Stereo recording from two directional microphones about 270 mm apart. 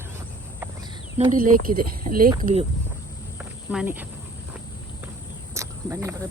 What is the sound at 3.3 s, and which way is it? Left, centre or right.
Cricket, centre.